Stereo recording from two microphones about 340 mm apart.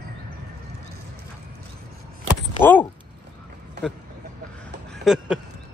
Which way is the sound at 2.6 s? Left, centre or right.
Centre.